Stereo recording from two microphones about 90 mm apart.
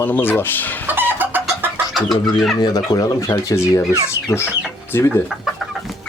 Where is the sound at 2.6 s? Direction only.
50° left (ahead or behind).